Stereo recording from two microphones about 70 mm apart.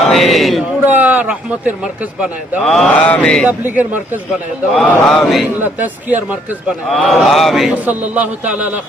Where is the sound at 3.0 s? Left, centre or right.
Centre.